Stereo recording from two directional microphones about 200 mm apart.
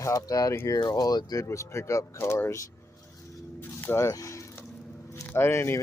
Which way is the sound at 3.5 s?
10° left (ahead or behind).